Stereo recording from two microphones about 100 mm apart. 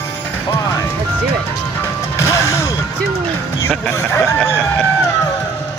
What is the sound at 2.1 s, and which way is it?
Music, 30° left (ahead or behind).